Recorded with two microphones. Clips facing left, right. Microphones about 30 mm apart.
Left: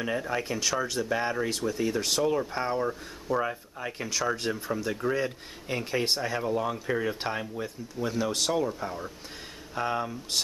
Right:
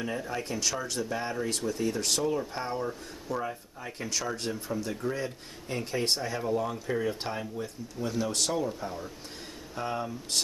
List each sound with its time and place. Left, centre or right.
0.0 s speech: centre
1.5 s speech: centre
3.3 s speech: left
4.0 s speech: centre